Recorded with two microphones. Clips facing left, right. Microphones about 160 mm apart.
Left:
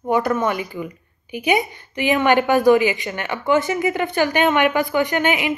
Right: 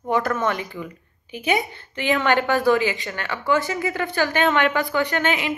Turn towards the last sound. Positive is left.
turn(degrees=15)  # may be behind; listen again after turning